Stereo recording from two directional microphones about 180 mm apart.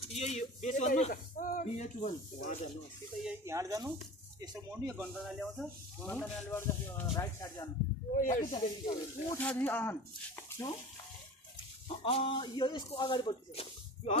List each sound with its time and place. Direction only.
0.1 s speech: 40° left (ahead or behind)
3.3 s speech: 15° right (ahead or behind)
5.2 s speech: 5° left (ahead or behind)
8.2 s speech: 50° left (ahead or behind)
8.5 s speech: 15° left (ahead or behind)
12.0 s speech: 30° left (ahead or behind)